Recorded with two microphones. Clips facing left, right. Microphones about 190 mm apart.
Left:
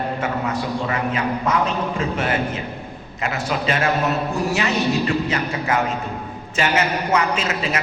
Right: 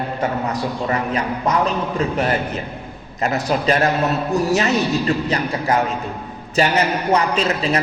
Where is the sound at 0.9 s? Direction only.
40° right (ahead or behind).